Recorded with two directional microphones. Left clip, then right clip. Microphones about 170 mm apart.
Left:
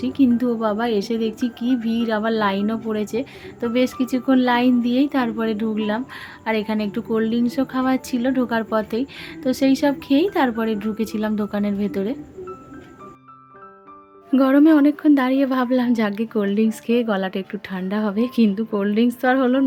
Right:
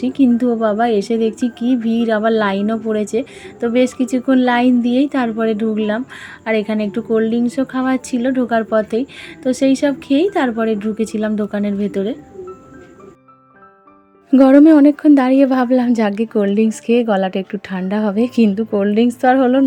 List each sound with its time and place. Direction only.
0.0 s a woman's voice: 20° right (ahead or behind)
14.3 s a woman's voice: 30° right (ahead or behind)